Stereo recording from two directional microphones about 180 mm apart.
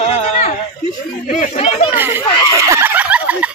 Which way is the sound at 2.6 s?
15° right (ahead or behind).